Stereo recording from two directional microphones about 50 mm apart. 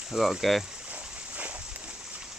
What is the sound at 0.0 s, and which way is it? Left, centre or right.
Speech, centre.